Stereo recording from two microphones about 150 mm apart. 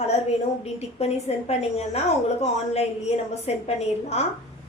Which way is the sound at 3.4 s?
45° left (ahead or behind).